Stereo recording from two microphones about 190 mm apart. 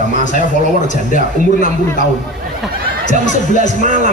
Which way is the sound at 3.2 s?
40° left (ahead or behind).